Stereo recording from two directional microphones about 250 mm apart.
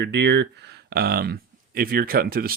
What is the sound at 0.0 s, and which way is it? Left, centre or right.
Speech, right.